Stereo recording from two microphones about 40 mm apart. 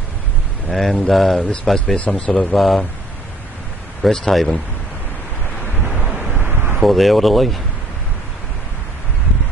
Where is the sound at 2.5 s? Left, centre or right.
Centre.